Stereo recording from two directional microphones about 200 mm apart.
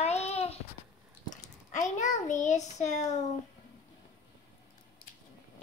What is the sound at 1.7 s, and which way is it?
A child's voice, 35° left (ahead or behind).